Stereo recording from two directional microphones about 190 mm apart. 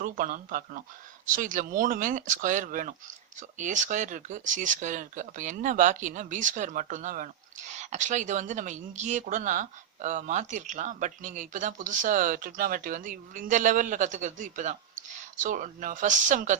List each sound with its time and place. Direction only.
0.0 s speech: 45° right (ahead or behind)